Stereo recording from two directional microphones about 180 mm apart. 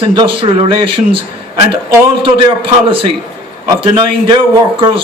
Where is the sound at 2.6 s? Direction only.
30° right (ahead or behind).